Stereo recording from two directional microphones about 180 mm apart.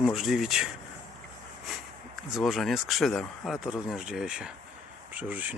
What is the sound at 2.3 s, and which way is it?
Speech, centre (ahead or behind).